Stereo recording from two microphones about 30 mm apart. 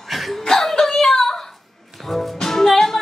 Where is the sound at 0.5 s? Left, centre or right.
Centre.